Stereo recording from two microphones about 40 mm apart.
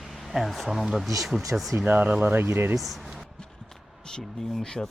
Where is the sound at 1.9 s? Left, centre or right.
Right.